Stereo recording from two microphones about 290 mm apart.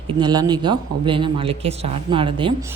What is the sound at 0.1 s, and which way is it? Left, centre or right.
A woman's voice, centre.